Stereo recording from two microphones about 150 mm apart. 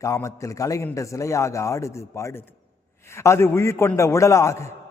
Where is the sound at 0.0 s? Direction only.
20° left (ahead or behind).